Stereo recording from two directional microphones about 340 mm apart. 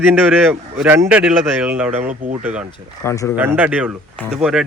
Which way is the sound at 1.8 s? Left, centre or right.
Right.